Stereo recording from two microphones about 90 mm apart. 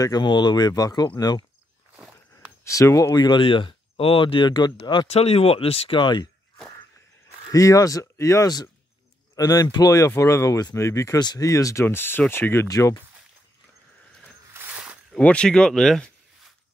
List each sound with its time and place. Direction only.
0.2 s speech: 60° left (ahead or behind)
2.6 s speech: 35° left (ahead or behind)
3.2 s speech: 60° left (ahead or behind)
5.0 s speech: 90° left; by 6.2 s 65° left (ahead or behind)
7.5 s speech: 40° left (ahead or behind)
11.1 s speech: 45° left (ahead or behind)
11.8 s speech: 25° left (ahead or behind)
12.6 s speech: 40° left (ahead or behind)
14.7 s a sound: 15° right (ahead or behind)
15.1 s speech: 10° left (ahead or behind)